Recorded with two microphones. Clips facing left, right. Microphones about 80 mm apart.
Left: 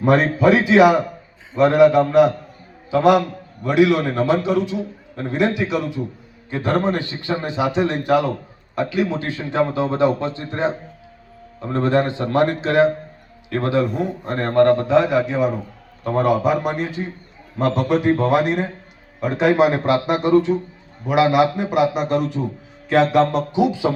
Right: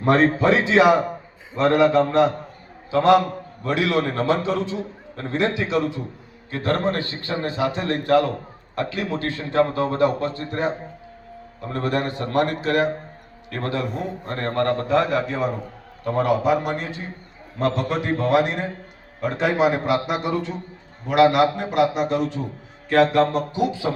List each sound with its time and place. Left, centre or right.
0.0 s a man's voice: centre
16.0 s a man's voice: centre
23.3 s a man's voice: centre